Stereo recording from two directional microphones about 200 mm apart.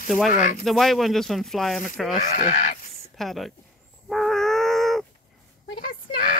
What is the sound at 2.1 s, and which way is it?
Speech, 40° left (ahead or behind).